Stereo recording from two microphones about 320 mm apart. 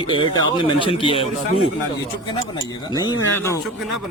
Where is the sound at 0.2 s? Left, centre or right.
Centre.